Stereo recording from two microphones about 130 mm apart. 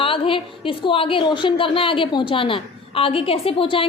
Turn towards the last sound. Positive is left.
turn(degrees=45)  # may be behind; listen again after turning